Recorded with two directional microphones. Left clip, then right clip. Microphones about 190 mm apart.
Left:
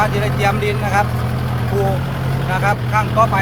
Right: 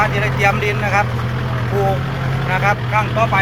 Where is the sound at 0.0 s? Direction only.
10° left (ahead or behind).